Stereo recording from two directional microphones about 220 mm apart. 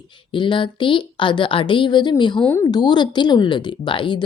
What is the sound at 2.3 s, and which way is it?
A woman's voice, 10° left (ahead or behind).